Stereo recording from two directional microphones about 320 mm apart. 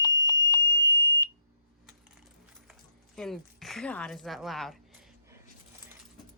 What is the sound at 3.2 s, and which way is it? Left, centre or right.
A woman's voice, centre.